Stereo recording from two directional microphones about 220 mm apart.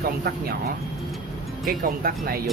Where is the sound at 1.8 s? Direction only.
40° right (ahead or behind).